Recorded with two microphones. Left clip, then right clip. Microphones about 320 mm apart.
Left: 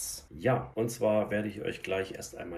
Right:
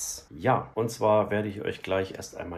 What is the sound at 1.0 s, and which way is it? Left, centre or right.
Speech, right.